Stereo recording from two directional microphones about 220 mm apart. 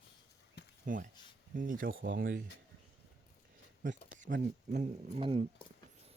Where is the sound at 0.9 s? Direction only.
35° right (ahead or behind).